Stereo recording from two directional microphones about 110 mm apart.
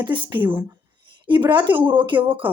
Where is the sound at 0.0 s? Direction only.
45° right (ahead or behind).